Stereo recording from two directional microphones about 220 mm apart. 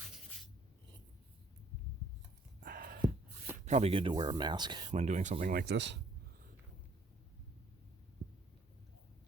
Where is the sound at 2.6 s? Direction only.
40° right (ahead or behind).